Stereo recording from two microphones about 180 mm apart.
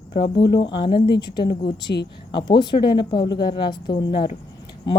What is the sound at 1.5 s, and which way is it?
Speech, 65° left (ahead or behind).